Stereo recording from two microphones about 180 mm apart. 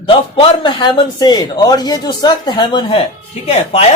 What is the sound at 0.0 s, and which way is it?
A man's voice, 30° left (ahead or behind).